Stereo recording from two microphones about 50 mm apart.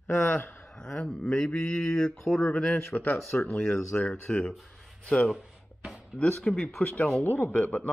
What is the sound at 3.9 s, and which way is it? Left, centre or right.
Speech, centre.